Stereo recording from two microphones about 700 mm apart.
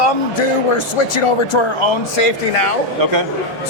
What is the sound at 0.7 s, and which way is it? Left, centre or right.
Speech, left.